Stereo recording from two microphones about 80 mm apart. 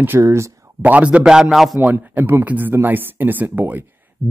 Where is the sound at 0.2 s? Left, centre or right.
Right.